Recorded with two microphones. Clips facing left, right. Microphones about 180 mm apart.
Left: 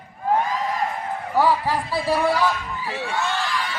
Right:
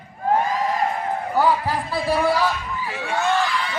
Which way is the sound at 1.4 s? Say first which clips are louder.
Even; centre (ahead or behind).